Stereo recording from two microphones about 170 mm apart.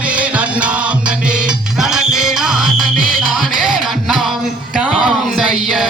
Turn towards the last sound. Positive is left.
turn(degrees=0)  # may be behind; listen again after turning